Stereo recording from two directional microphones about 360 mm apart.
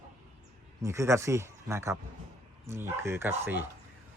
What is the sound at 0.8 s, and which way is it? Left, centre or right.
A man's voice, centre.